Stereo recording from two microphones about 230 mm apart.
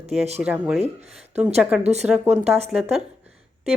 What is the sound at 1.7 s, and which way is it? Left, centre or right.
Speech, centre.